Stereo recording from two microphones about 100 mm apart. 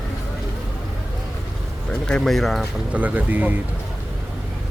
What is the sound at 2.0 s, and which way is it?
Speech, 5° left (ahead or behind).